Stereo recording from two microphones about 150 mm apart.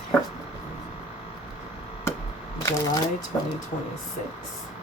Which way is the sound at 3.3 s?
25° left (ahead or behind).